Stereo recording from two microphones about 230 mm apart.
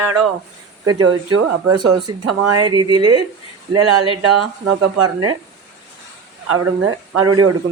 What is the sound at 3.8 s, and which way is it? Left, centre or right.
A man's voice, right.